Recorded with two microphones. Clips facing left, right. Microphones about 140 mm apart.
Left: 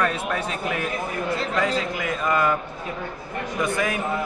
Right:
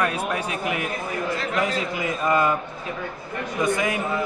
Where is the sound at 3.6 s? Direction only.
20° right (ahead or behind).